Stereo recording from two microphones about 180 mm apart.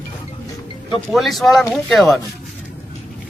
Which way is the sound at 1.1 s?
Centre (ahead or behind).